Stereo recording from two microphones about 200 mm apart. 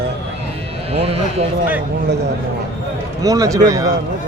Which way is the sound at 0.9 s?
30° right (ahead or behind).